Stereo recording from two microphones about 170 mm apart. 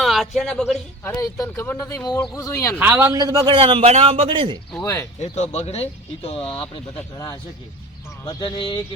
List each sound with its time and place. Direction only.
0.0 s speech: centre (ahead or behind)
1.0 s speech: 20° left (ahead or behind)
2.7 s a man's voice: 10° right (ahead or behind); by 4.6 s 30° right (ahead or behind)
5.2 s speech: 40° left (ahead or behind)
8.2 s speech: 20° left (ahead or behind)